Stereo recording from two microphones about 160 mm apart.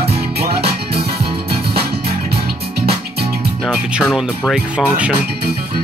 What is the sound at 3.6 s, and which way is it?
Speech, 5° right (ahead or behind).